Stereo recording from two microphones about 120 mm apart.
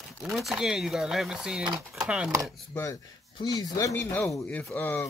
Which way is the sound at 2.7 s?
30° left (ahead or behind).